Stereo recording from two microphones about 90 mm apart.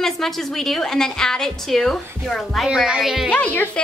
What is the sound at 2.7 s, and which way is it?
Speech, 10° right (ahead or behind).